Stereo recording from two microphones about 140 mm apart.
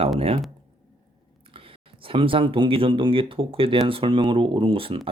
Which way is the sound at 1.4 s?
40° right (ahead or behind).